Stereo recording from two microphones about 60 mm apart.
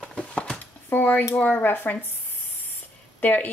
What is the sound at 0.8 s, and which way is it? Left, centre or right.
Speech, left.